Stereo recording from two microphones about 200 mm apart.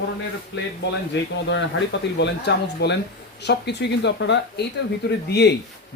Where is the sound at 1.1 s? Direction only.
60° left (ahead or behind).